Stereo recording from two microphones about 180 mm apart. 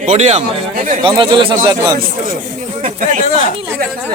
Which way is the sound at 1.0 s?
30° right (ahead or behind).